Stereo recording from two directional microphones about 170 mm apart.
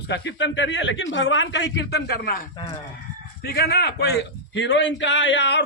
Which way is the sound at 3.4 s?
65° left (ahead or behind).